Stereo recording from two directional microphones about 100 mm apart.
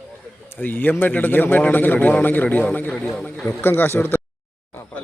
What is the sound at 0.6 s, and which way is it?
A man's voice, 20° left (ahead or behind).